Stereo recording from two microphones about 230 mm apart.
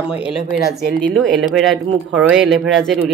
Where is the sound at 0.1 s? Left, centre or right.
Centre.